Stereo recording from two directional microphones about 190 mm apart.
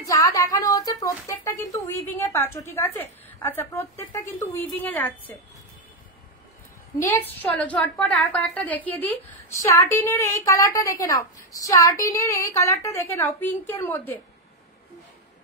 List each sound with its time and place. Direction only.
0.0 s a woman's voice: 20° left (ahead or behind)
7.0 s a woman's voice: 10° left (ahead or behind)